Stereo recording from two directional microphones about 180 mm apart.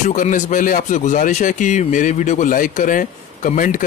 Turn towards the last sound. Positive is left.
turn(degrees=50)  # may be behind; listen again after turning